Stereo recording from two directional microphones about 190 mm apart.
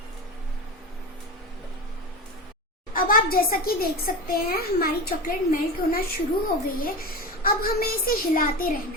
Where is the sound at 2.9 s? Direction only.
50° left (ahead or behind).